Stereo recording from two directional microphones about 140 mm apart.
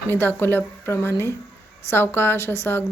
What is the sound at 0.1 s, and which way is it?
Speech, 15° left (ahead or behind).